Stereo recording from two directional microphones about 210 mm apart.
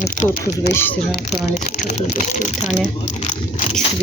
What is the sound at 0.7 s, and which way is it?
Speech, 10° left (ahead or behind).